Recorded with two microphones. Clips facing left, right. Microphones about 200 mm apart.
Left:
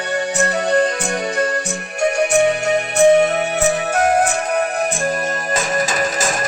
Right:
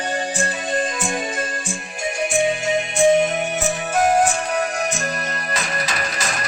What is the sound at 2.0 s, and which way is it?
Music, 70° left (ahead or behind).